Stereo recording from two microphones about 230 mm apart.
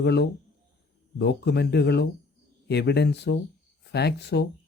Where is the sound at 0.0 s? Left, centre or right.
Left.